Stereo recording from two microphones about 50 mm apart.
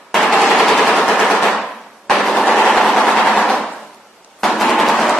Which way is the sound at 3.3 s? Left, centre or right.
Centre.